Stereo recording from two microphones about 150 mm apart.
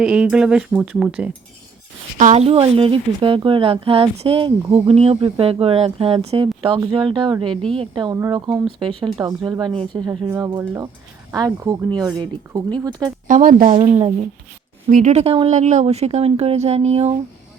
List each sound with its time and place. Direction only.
0.0 s speech: 5° right (ahead or behind)
2.1 s speech: 50° right (ahead or behind); by 8.1 s 30° right (ahead or behind)
8.1 s speech: 20° right (ahead or behind)
10.2 s speech: 15° right (ahead or behind)
13.2 s speech: 60° right (ahead or behind)
13.7 s speech: 40° right (ahead or behind)
14.8 s speech: 60° right (ahead or behind)
15.2 s speech: 40° right (ahead or behind)